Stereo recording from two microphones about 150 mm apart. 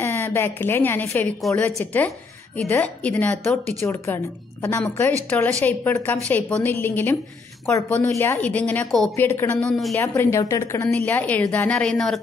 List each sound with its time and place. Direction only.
0.0 s a woman's voice: 15° left (ahead or behind)
9.9 s a woman's voice: 15° left (ahead or behind)